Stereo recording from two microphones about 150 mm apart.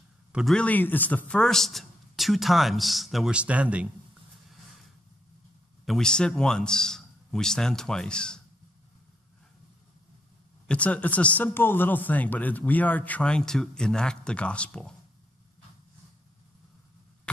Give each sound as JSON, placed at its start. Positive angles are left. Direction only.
{"t": 0.3, "sound": "a man's voice", "side_deg": -5}
{"t": 0.6, "sound": "a man's voice", "side_deg": 10}
{"t": 5.9, "sound": "a man's voice", "side_deg": 5}
{"t": 10.7, "sound": "speech", "side_deg": 10}